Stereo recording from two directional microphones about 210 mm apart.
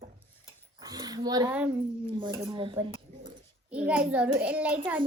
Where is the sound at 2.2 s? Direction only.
25° right (ahead or behind).